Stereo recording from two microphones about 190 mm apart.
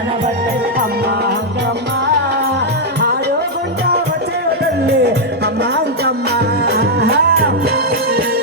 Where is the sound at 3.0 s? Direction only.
60° right (ahead or behind).